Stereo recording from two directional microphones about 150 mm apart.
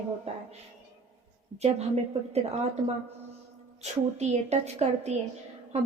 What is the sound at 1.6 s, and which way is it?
Speech, 45° right (ahead or behind).